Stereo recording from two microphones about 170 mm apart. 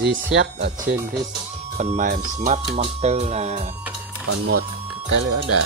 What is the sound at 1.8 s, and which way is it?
Speech, 45° right (ahead or behind).